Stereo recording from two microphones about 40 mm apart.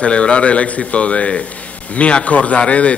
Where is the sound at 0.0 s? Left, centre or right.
Left.